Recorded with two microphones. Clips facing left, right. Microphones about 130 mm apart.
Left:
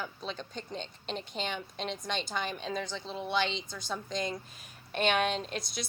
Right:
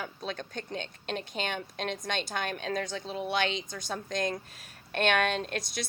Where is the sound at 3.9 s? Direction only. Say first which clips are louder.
Right 3 dB; 55° right (ahead or behind).